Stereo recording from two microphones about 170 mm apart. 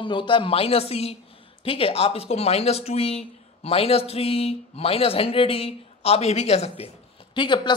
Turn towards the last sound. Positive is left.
turn(degrees=25)  # may be behind; listen again after turning